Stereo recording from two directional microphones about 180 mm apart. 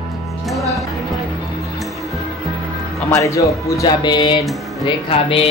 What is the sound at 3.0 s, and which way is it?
Speech, 15° left (ahead or behind).